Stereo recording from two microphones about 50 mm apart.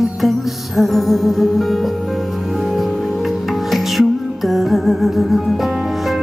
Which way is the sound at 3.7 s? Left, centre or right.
Centre.